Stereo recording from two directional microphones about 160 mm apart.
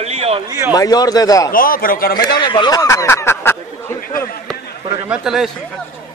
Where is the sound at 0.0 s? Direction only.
40° right (ahead or behind).